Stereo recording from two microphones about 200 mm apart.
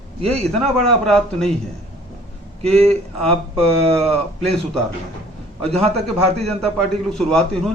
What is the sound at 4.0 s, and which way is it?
Speech, 30° right (ahead or behind).